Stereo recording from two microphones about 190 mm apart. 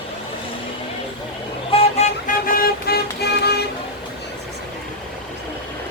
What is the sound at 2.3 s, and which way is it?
Vehicle, 50° left (ahead or behind).